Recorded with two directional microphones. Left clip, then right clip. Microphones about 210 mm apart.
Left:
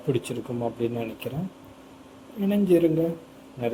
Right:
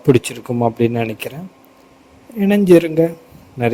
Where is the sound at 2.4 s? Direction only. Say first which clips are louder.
Right 10 dB; 45° right (ahead or behind).